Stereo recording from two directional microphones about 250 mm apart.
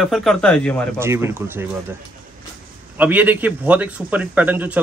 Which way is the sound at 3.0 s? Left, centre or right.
Centre.